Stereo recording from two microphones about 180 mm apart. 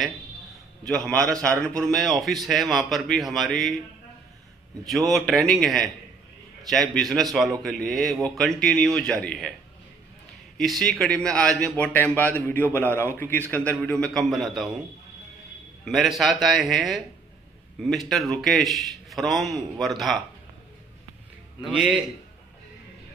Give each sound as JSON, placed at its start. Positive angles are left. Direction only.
{"t": 0.8, "sound": "a man's voice", "side_deg": 5}
{"t": 4.8, "sound": "a man's voice", "side_deg": 0}
{"t": 10.6, "sound": "a man's voice", "side_deg": 0}
{"t": 15.8, "sound": "a man's voice", "side_deg": 0}
{"t": 21.6, "sound": "a man's voice", "side_deg": 0}